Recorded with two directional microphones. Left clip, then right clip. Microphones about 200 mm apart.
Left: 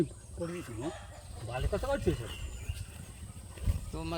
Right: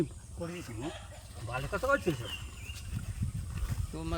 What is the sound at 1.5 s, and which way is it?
Speech, 20° right (ahead or behind).